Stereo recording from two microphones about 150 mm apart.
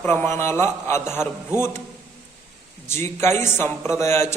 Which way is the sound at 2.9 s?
15° left (ahead or behind).